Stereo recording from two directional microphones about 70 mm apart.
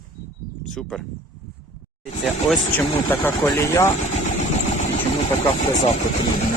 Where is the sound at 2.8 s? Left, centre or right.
Left.